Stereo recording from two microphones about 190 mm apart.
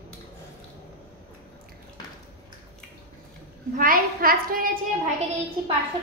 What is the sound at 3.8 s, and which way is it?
A woman's voice, 45° right (ahead or behind).